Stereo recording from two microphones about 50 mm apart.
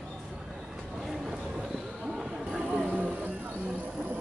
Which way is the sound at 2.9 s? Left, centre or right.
Right.